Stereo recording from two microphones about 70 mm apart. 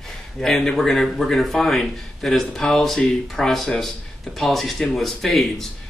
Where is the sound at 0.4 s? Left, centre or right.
Centre.